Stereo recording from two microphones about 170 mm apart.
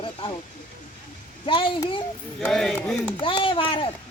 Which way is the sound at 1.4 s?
30° left (ahead or behind).